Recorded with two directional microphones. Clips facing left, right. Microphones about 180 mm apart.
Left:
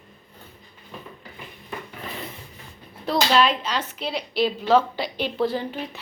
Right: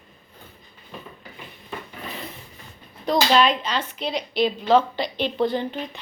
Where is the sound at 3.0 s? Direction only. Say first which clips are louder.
Right 1 dB; centre (ahead or behind).